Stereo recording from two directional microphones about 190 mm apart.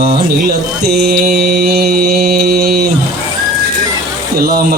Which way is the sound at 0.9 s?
55° right (ahead or behind).